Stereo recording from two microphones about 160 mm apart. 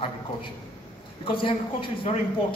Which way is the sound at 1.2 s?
30° left (ahead or behind).